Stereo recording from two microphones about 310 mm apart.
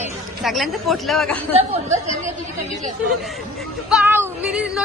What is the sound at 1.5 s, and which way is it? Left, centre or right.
Speech, right.